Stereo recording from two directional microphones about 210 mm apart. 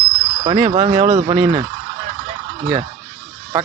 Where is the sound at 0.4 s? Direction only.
30° right (ahead or behind).